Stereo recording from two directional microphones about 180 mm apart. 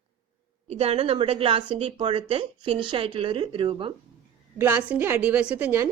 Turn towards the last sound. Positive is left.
turn(degrees=-10)  # may be behind; listen again after turning